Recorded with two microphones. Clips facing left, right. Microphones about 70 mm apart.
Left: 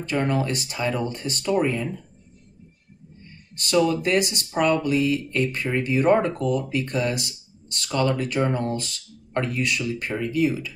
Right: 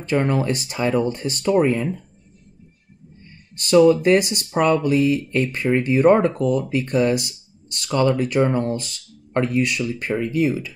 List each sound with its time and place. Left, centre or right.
0.0 s speech: right
3.5 s speech: right